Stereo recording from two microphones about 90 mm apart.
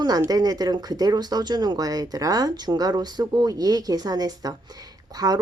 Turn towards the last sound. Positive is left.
turn(degrees=-45)  # may be behind; listen again after turning